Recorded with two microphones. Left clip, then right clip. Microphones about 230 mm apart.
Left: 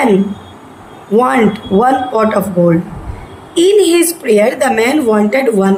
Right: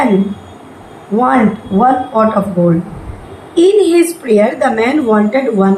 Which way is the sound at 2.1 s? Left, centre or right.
Left.